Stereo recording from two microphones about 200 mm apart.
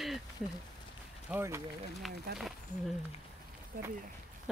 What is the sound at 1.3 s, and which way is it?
Speech, 15° right (ahead or behind).